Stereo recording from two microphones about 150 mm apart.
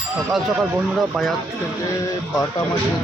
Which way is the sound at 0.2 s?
Centre (ahead or behind).